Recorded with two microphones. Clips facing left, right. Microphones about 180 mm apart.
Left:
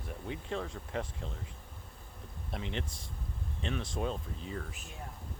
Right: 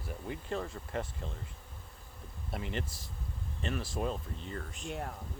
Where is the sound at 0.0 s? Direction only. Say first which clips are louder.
Even; centre (ahead or behind).